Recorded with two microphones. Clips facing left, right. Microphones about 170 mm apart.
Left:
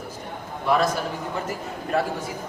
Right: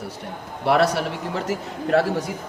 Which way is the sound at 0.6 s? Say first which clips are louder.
Right 3 dB; 75° right (ahead or behind).